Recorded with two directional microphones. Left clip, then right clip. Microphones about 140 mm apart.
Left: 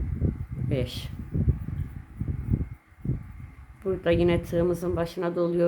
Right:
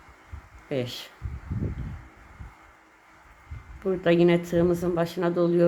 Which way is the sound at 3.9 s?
Centre (ahead or behind).